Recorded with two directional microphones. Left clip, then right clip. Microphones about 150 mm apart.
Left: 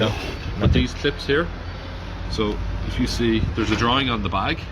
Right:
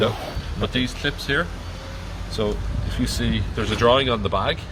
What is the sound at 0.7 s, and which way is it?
Speech, 90° right.